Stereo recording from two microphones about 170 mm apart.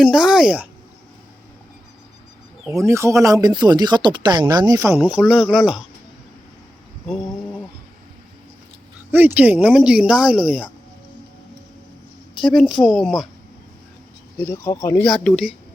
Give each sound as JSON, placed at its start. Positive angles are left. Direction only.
{"t": 0.0, "sound": "speech", "side_deg": -5}
{"t": 2.8, "sound": "speech", "side_deg": -15}
{"t": 9.1, "sound": "speech", "side_deg": -10}
{"t": 12.4, "sound": "speech", "side_deg": 0}
{"t": 14.4, "sound": "speech", "side_deg": 15}
{"t": 15.0, "sound": "speech", "side_deg": 0}